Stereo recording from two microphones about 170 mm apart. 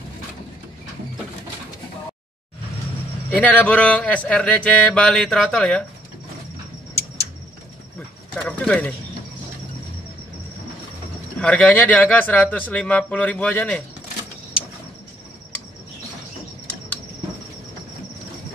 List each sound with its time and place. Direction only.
3.3 s speech: 10° left (ahead or behind)
8.4 s speech: 5° left (ahead or behind)
11.3 s speech: 5° left (ahead or behind)